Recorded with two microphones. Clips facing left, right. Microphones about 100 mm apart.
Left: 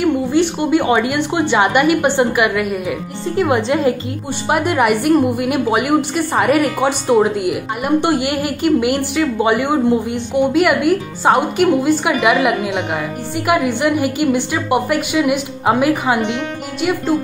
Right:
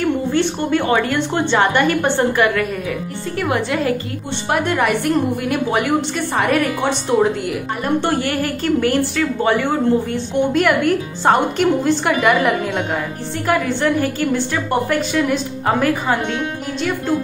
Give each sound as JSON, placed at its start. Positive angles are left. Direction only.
{"t": 0.0, "sound": "a woman's voice", "side_deg": 15}
{"t": 4.5, "sound": "a woman's voice", "side_deg": 10}